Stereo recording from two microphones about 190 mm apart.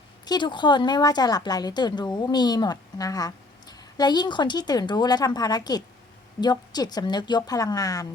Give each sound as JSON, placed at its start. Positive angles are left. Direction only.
{"t": 0.3, "sound": "speech", "side_deg": 25}